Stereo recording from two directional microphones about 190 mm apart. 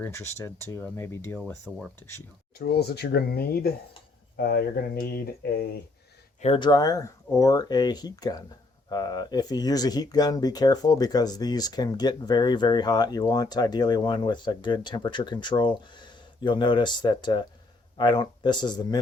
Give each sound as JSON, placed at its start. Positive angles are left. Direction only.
{"t": 0.0, "sound": "speech", "side_deg": 15}
{"t": 2.6, "sound": "speech", "side_deg": 55}
{"t": 6.4, "sound": "speech", "side_deg": 25}